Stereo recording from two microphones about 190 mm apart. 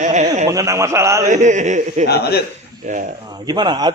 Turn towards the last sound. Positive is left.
turn(degrees=-20)  # may be behind; listen again after turning